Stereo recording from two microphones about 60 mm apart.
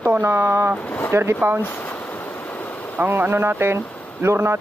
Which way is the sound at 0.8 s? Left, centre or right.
Left.